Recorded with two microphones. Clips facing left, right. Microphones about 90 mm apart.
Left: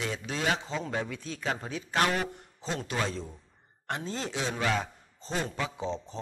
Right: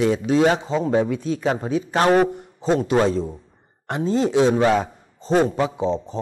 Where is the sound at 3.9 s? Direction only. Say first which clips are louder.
Right 13 dB; 15° right (ahead or behind).